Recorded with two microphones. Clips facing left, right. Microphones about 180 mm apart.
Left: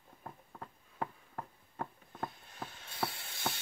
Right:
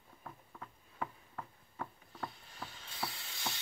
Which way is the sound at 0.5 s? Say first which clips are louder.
Left 3 dB; 40° left (ahead or behind).